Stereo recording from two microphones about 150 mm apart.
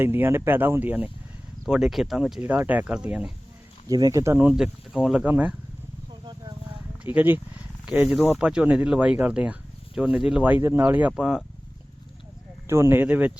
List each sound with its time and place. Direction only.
0.0 s speech: 15° right (ahead or behind)
3.8 s speech: 25° right (ahead or behind)
7.0 s speech: 10° right (ahead or behind)
12.6 s speech: 15° right (ahead or behind)